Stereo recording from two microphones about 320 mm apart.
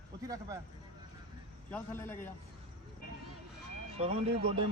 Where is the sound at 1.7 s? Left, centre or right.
Centre.